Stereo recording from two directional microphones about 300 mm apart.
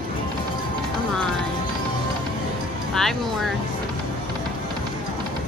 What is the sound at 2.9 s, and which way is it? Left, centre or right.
Music, centre.